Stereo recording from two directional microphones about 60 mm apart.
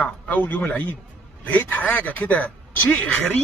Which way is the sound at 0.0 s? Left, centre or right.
Left.